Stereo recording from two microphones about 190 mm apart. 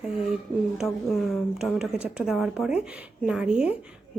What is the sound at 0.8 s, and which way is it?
A woman's voice, centre (ahead or behind).